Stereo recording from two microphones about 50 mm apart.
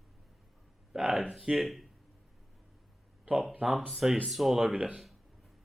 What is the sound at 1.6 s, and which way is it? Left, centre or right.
Speech, centre.